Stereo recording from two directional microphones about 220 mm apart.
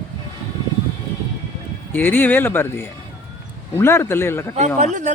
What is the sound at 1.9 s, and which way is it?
Speech, 10° left (ahead or behind).